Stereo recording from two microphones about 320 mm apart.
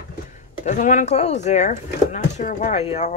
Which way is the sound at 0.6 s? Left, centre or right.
Left.